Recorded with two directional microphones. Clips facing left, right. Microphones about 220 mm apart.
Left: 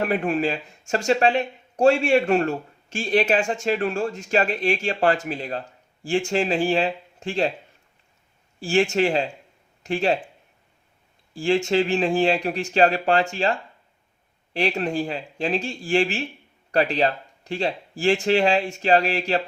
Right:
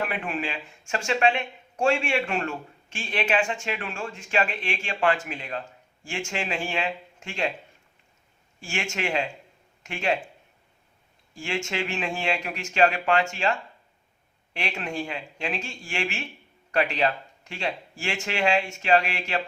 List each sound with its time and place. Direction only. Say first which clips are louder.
0.0 s speech: left 8 dB; 40° left (ahead or behind)
8.6 s speech: left 11 dB; 35° left (ahead or behind)
11.3 s speech: left 10 dB; 35° left (ahead or behind)